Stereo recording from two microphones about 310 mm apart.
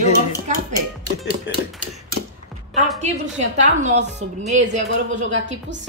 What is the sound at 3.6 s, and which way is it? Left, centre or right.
Speech, right.